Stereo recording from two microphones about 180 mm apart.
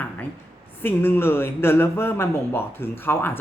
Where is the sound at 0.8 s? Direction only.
10° left (ahead or behind).